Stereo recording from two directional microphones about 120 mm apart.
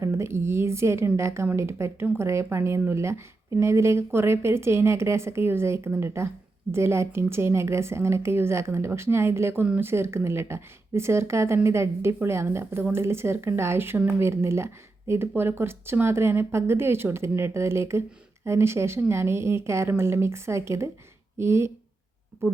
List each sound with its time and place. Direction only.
0.0 s a woman's voice: 20° right (ahead or behind)